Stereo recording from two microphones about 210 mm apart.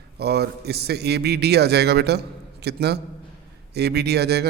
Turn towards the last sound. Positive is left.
turn(degrees=-50)  # may be behind; listen again after turning